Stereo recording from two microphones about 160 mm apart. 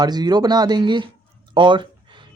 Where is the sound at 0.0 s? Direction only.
25° right (ahead or behind).